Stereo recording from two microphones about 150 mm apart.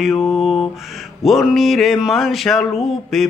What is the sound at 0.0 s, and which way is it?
Mantra, centre (ahead or behind).